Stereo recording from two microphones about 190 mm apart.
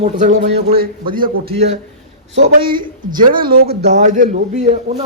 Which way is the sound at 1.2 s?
30° right (ahead or behind).